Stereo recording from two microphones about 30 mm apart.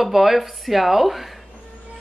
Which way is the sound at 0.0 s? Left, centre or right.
Centre.